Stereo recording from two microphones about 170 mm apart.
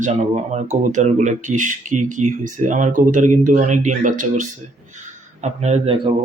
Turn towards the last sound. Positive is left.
turn(degrees=-35)  # may be behind; listen again after turning